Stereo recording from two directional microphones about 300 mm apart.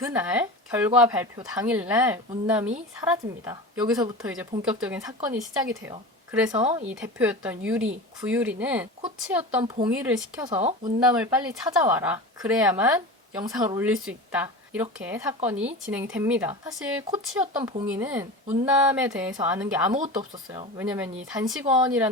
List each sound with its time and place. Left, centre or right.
0.0 s speech: centre
6.5 s speech: right
6.7 s speech: centre
10.5 s speech: right
11.0 s speech: centre